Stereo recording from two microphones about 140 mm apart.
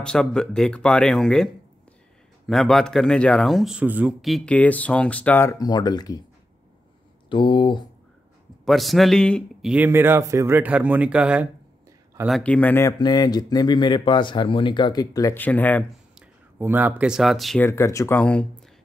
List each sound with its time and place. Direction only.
0.0 s a man's voice: 5° left (ahead or behind); by 4.1 s 10° right (ahead or behind)
4.2 s a man's voice: centre (ahead or behind)
4.6 s speech: 10° left (ahead or behind); by 6.2 s 30° left (ahead or behind)
7.2 s speech: 35° left (ahead or behind)
8.6 s a man's voice: centre (ahead or behind)
9.8 s speech: 15° right (ahead or behind)
12.3 s speech: 5° left (ahead or behind)
13.0 s speech: 30° left (ahead or behind)
15.3 s speech: 10° left (ahead or behind)
16.2 s speech: 15° right (ahead or behind)
17.6 s speech: 20° left (ahead or behind)